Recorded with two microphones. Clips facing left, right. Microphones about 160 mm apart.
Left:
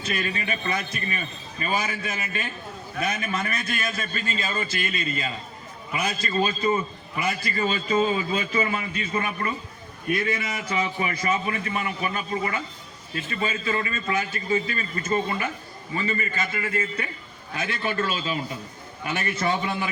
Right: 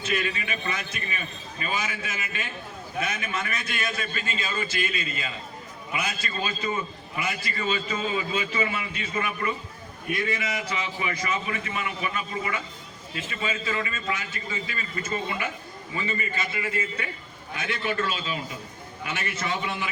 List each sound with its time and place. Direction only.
0.0 s a man's voice: 40° left (ahead or behind)
17.7 s a man's voice: 35° left (ahead or behind)